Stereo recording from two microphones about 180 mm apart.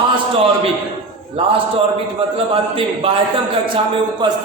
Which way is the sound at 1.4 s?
30° right (ahead or behind).